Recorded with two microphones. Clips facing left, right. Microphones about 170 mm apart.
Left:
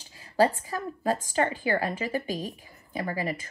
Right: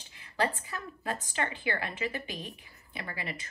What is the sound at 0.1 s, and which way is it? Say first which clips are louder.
A woman's voice: left 8 dB; 35° left (ahead or behind).